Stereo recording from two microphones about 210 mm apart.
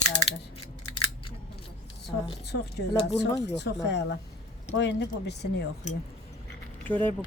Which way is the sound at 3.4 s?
55° left (ahead or behind).